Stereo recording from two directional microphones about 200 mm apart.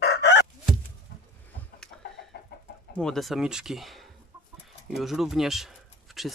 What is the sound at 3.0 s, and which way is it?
Speech, centre (ahead or behind).